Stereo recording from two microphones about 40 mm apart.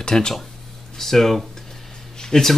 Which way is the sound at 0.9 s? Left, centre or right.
Centre.